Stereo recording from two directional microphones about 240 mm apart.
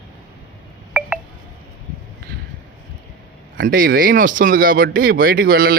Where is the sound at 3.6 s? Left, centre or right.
Right.